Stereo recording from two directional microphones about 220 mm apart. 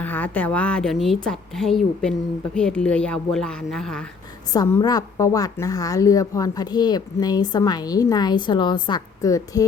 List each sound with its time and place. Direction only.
0.0 s a woman's voice: 10° left (ahead or behind)
4.5 s a woman's voice: 15° left (ahead or behind)